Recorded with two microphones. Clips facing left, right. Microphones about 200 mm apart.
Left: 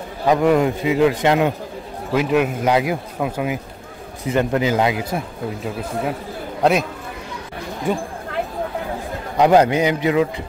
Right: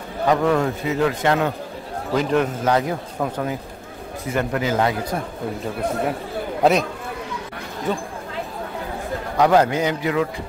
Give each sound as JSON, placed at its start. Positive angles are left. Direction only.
{"t": 0.3, "sound": "a man's voice", "side_deg": 15}
{"t": 4.3, "sound": "a man's voice", "side_deg": 20}
{"t": 6.6, "sound": "speech", "side_deg": 0}
{"t": 7.9, "sound": "a man's voice", "side_deg": 10}
{"t": 9.4, "sound": "a man's voice", "side_deg": 15}